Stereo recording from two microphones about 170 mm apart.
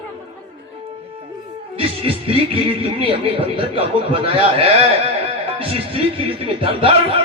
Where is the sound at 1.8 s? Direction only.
30° right (ahead or behind).